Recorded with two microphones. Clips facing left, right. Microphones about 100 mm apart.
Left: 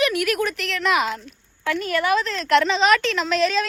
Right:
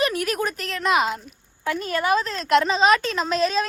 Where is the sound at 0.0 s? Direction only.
35° right (ahead or behind).